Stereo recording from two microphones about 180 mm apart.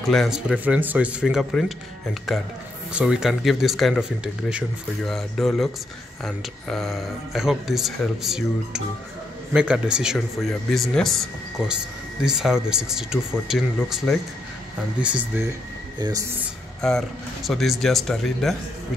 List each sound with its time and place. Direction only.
0.0 s speech: centre (ahead or behind)
16.0 s speech: 20° right (ahead or behind)
16.8 s speech: centre (ahead or behind)